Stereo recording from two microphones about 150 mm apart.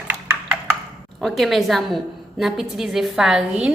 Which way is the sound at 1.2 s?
Centre (ahead or behind).